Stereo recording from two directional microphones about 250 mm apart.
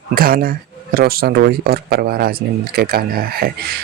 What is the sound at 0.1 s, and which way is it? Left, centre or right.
Speech, right.